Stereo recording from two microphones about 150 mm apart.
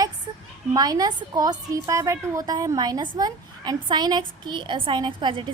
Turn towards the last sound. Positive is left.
turn(degrees=-30)  # may be behind; listen again after turning